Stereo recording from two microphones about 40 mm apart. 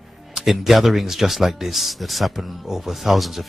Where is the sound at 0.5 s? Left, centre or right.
Centre.